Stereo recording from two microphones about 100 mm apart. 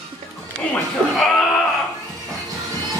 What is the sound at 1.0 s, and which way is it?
Speech, 10° left (ahead or behind).